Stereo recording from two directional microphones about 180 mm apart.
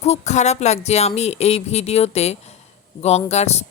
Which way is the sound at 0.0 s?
40° left (ahead or behind).